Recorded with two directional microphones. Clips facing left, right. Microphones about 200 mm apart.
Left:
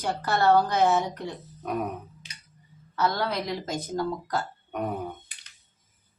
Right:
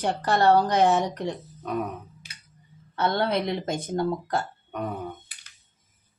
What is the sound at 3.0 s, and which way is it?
Speech, 25° right (ahead or behind).